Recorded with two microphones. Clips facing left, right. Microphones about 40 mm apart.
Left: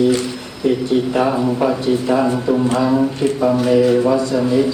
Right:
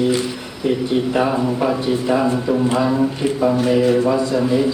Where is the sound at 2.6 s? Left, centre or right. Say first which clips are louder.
Left 1 dB; centre.